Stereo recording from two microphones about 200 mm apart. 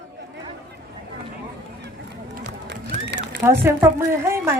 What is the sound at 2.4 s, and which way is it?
Run, 60° right (ahead or behind).